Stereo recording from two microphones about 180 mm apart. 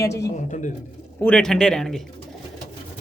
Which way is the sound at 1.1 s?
5° left (ahead or behind).